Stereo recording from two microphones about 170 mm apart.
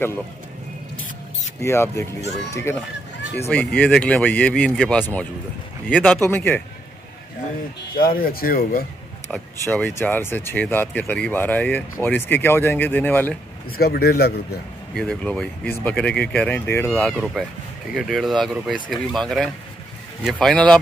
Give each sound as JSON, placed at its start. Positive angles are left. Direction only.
{"t": 1.6, "sound": "speech", "side_deg": 15}
{"t": 7.9, "sound": "speech", "side_deg": 60}
{"t": 9.3, "sound": "speech", "side_deg": 10}
{"t": 13.7, "sound": "speech", "side_deg": 65}
{"t": 15.0, "sound": "speech", "side_deg": 5}
{"t": 17.1, "sound": "speech", "side_deg": -5}